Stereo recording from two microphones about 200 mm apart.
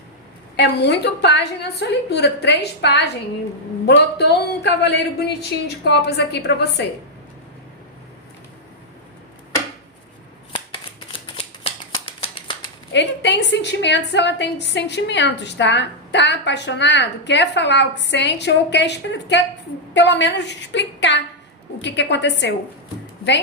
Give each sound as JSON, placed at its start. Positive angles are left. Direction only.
{"t": 0.5, "sound": "a woman's voice", "side_deg": 55}
{"t": 11.3, "sound": "shuffling cards", "side_deg": 30}
{"t": 12.9, "sound": "a woman's voice", "side_deg": 60}